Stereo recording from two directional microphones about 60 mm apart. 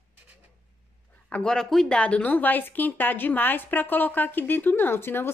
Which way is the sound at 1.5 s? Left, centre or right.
Centre.